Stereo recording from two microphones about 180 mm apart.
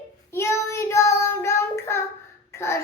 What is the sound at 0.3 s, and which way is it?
Child singing, 15° left (ahead or behind).